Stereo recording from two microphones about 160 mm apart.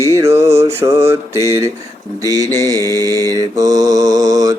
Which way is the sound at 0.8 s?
15° right (ahead or behind).